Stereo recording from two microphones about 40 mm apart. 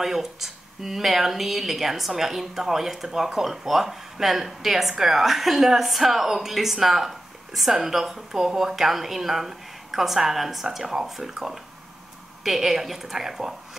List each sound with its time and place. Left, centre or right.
0.0 s speech: centre